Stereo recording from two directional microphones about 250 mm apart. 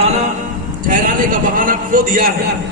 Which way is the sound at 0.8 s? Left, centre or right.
Right.